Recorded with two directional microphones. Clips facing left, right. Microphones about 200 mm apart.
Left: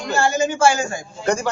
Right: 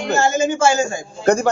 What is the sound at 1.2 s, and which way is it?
Speech, 55° right (ahead or behind).